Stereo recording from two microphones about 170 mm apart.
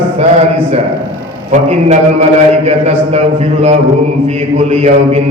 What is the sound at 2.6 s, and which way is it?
A man's voice, 40° right (ahead or behind).